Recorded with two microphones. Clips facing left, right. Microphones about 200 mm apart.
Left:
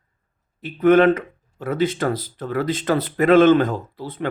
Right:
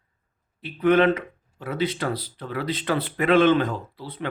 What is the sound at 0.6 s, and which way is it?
Speech, 45° left (ahead or behind).